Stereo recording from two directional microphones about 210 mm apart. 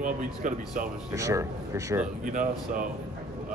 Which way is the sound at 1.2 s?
15° right (ahead or behind).